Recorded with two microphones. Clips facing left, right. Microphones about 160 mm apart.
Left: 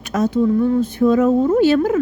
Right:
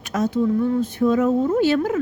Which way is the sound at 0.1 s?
70° left (ahead or behind).